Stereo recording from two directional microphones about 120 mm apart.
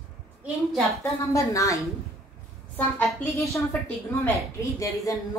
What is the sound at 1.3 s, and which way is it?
Speech, 25° left (ahead or behind).